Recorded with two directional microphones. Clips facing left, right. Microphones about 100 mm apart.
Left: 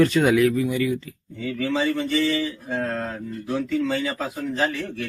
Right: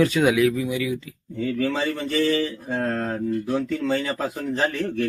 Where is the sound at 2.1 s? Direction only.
45° right (ahead or behind).